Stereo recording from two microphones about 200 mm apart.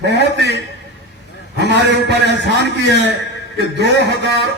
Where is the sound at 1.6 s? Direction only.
60° right (ahead or behind).